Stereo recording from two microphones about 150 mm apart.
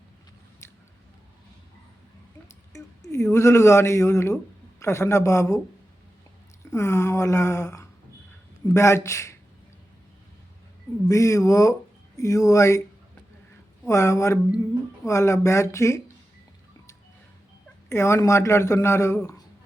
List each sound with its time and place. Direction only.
0.6 s a sound: 20° left (ahead or behind)
2.7 s speech: 20° left (ahead or behind)
6.7 s speech: 20° left (ahead or behind)
11.1 s speech: 20° left (ahead or behind)
13.8 s speech: 20° left (ahead or behind)
17.8 s speech: 20° left (ahead or behind)